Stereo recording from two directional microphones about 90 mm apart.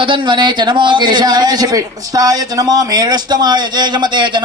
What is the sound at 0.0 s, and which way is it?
A man's voice, 65° right (ahead or behind).